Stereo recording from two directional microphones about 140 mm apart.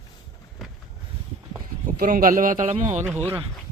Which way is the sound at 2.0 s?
85° right.